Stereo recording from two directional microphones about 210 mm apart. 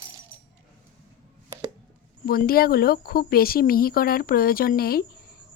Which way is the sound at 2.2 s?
45° left (ahead or behind).